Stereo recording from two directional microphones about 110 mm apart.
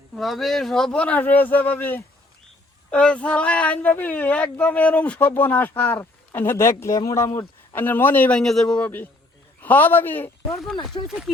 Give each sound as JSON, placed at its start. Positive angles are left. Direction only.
{"t": 0.2, "sound": "speech", "side_deg": 0}
{"t": 8.4, "sound": "a man's voice", "side_deg": 5}
{"t": 10.9, "sound": "speech", "side_deg": 50}